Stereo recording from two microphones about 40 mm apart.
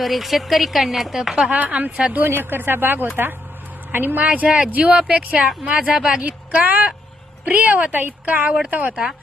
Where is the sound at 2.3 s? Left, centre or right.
Right.